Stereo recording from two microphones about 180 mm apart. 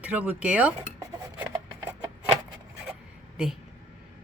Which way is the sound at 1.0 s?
10° right (ahead or behind).